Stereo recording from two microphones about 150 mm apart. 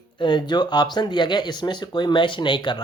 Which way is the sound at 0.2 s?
30° left (ahead or behind).